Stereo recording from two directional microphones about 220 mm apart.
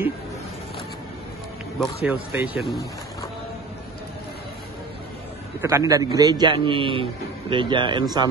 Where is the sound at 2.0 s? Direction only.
5° right (ahead or behind).